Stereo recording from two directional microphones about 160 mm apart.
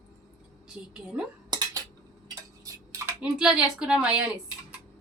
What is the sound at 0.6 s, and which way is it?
Speech, 5° right (ahead or behind).